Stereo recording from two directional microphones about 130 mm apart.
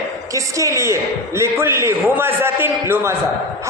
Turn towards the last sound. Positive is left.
turn(degrees=-20)  # may be behind; listen again after turning